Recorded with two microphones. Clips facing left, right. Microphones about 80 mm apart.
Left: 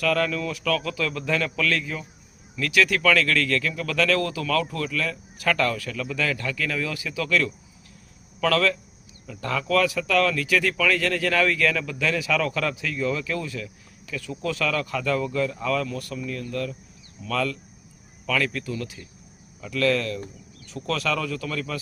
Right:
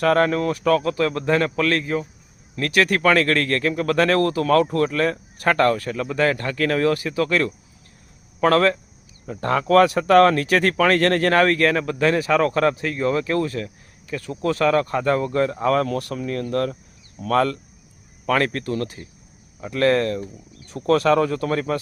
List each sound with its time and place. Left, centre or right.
0.0 s speech: right
15.9 s speech: right